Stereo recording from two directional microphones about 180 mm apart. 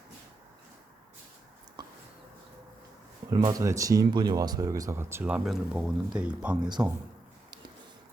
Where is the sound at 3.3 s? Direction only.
20° right (ahead or behind).